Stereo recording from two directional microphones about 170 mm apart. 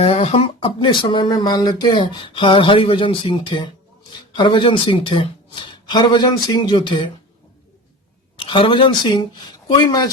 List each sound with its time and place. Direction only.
0.0 s speech: 35° left (ahead or behind)
8.4 s speech: 30° left (ahead or behind)